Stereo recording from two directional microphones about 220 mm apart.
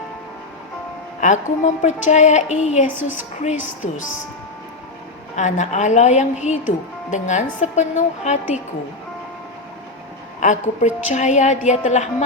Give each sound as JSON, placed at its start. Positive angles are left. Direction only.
{"t": 1.2, "sound": "a woman's voice", "side_deg": 35}
{"t": 2.8, "sound": "a woman's voice", "side_deg": -10}
{"t": 3.8, "sound": "a woman's voice", "side_deg": 30}
{"t": 5.4, "sound": "a woman's voice", "side_deg": 35}
{"t": 10.4, "sound": "a woman's voice", "side_deg": 35}